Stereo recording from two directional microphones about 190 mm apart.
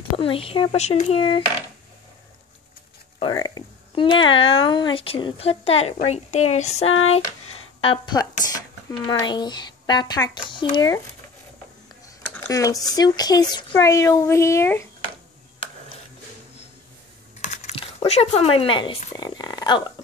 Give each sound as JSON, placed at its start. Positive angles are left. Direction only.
{"t": 0.2, "sound": "speech", "side_deg": 30}
{"t": 3.2, "sound": "speech", "side_deg": 25}
{"t": 6.9, "sound": "speech", "side_deg": 90}
{"t": 7.8, "sound": "speech", "side_deg": 25}
{"t": 12.4, "sound": "speech", "side_deg": 15}
{"t": 17.4, "sound": "speech", "side_deg": 35}
{"t": 19.1, "sound": "speech", "side_deg": 20}